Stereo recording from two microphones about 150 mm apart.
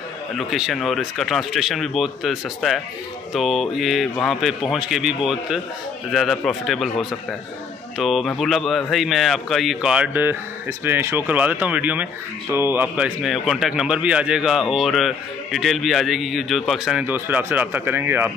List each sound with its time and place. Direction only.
0.4 s speech: centre (ahead or behind)